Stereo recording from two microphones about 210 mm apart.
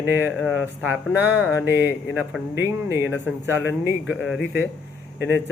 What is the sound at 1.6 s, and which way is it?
Speech, 55° left (ahead or behind).